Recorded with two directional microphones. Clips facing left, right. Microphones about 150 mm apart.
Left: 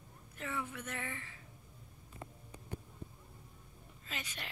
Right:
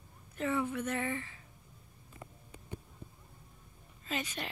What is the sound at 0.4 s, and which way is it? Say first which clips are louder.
Speech: right 9 dB; 30° right (ahead or behind).